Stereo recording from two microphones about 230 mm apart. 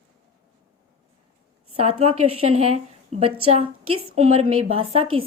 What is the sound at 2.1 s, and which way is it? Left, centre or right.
Speech, right.